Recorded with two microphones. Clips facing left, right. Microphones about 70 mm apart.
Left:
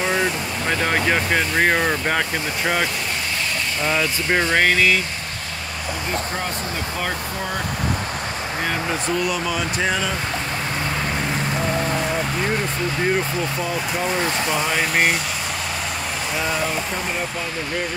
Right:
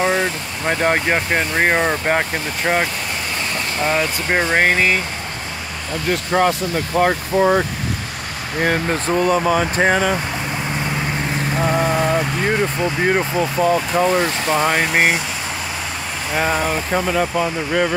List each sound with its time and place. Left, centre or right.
0.0 s vehicle: right
0.7 s speech: right
3.8 s speech: right
6.3 s speech: right
7.1 s speech: right
11.7 s a sound: right
13.0 s speech: right
14.1 s speech: right
16.3 s speech: right
16.9 s speech: right